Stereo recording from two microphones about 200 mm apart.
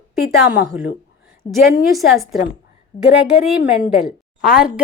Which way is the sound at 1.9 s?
Centre (ahead or behind).